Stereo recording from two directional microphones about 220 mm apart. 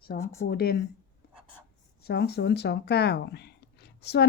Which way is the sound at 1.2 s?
45° left (ahead or behind).